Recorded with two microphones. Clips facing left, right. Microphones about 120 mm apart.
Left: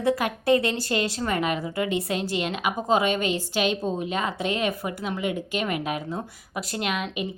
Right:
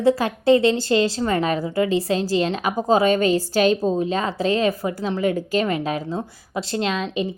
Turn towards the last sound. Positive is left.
turn(degrees=-30)  # may be behind; listen again after turning